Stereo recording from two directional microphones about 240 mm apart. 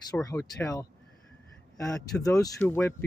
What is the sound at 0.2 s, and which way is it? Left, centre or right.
Speech, centre.